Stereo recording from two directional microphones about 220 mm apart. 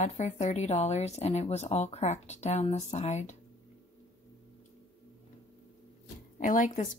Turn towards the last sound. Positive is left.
turn(degrees=35)  # may be behind; listen again after turning